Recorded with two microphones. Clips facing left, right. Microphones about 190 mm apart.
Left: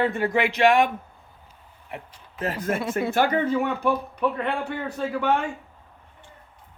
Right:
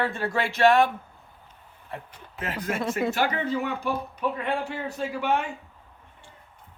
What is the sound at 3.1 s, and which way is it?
Speech, 55° left (ahead or behind).